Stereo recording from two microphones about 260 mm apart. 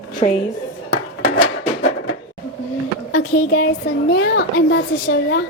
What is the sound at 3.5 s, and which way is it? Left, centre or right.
A woman's voice, left.